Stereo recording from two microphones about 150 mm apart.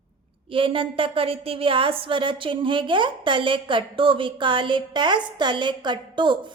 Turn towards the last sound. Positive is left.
turn(degrees=-30)  # may be behind; listen again after turning